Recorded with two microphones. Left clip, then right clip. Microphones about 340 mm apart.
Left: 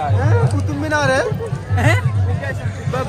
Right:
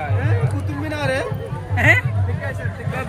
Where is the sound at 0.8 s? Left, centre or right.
Centre.